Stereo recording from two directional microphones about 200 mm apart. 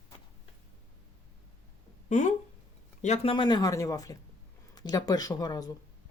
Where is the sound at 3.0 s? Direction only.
30° left (ahead or behind).